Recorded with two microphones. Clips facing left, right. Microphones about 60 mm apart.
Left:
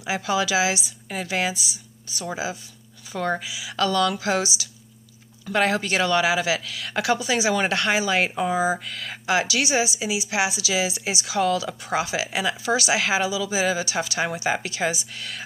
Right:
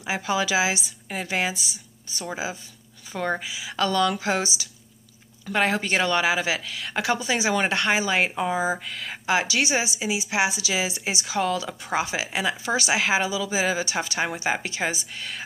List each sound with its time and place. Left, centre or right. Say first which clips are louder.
0.0 s a woman's voice: left 1 dB; right
3.1 s a woman's voice: left 1 dB; right
5.5 s a woman's voice: left 1 dB; right